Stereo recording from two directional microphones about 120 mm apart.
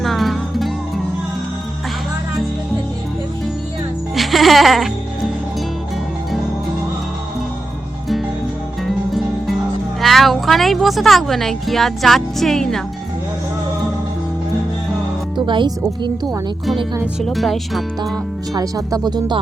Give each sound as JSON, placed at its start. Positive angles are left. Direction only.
{"t": 0.0, "sound": "music", "side_deg": 0}
{"t": 4.1, "sound": "music", "side_deg": 0}
{"t": 8.9, "sound": "music", "side_deg": 0}
{"t": 10.0, "sound": "speech", "side_deg": 0}
{"t": 15.4, "sound": "speech", "side_deg": -40}
{"t": 17.2, "sound": "speech", "side_deg": 0}
{"t": 18.5, "sound": "speech", "side_deg": -30}